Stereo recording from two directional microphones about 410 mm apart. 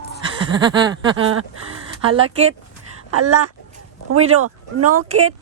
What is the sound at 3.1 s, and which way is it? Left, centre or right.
Speech, right.